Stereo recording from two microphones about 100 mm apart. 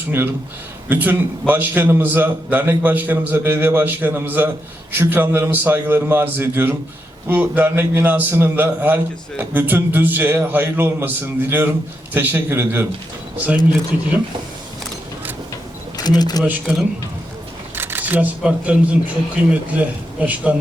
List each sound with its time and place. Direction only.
0.9 s a man's voice: 20° right (ahead or behind)
16.0 s speech: 45° left (ahead or behind)
16.4 s speech: 10° right (ahead or behind)
17.7 s speech: 20° right (ahead or behind)